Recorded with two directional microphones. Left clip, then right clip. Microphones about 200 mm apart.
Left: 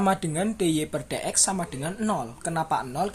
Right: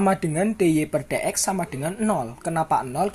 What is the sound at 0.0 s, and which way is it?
A woman's voice, 30° right (ahead or behind).